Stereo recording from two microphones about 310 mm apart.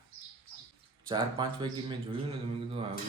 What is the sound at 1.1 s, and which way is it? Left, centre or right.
Speech, centre.